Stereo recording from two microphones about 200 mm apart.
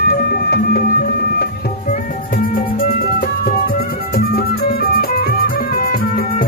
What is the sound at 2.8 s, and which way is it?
Music, 45° left (ahead or behind).